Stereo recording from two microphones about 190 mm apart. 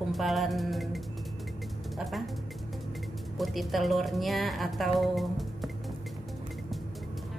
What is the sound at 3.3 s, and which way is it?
A woman's voice, centre (ahead or behind).